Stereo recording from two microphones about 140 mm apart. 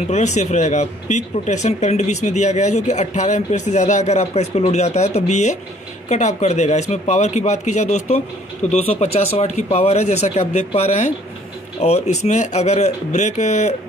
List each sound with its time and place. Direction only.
0.1 s speech: 55° left (ahead or behind)